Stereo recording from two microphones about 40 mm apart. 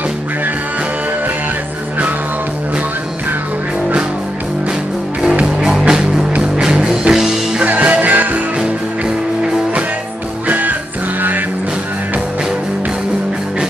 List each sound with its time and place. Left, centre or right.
5.7 s music: centre
6.5 s music: centre
7.6 s music: right
8.5 s music: right
10.4 s music: right